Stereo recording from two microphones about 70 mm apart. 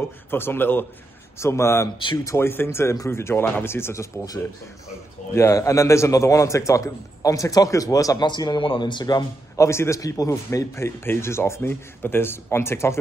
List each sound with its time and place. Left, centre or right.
0.3 s speech: left
1.4 s speech: left
5.3 s a man's voice: left
8.2 s speech: left
9.6 s a man's voice: left